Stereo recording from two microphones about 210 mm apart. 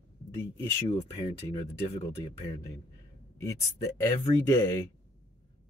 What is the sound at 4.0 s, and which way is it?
Speech, 15° left (ahead or behind).